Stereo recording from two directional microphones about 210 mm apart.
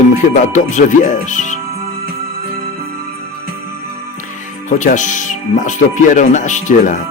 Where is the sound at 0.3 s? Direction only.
35° left (ahead or behind).